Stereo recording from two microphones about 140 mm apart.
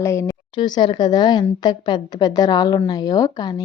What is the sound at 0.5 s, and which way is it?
A woman's voice, 30° left (ahead or behind).